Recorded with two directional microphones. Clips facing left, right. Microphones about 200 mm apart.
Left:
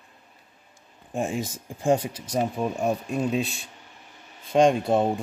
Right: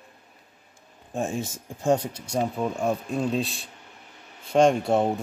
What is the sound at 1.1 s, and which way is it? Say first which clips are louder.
Speech: left 1 dB; 10° left (ahead or behind).